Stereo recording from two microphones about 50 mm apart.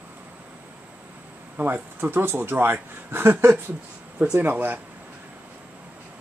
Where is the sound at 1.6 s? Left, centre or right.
Right.